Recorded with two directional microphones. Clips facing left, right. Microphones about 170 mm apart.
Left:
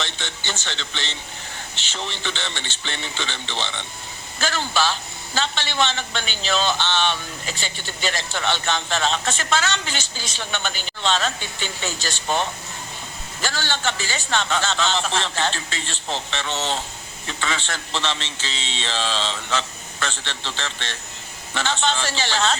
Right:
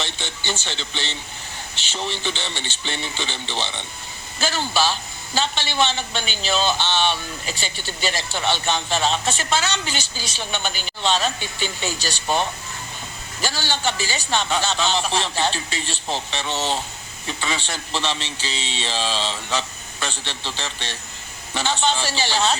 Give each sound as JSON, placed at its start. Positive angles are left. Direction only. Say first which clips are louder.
{"t": 0.0, "sound": "a man's voice", "louder": "right 1 dB", "side_deg": -15}
{"t": 11.9, "sound": "speech", "louder": "right 1 dB", "side_deg": 20}
{"t": 13.4, "sound": "a man's voice", "louder": "right 1 dB", "side_deg": -15}